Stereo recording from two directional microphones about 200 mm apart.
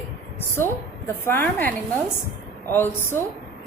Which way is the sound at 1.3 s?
10° left (ahead or behind).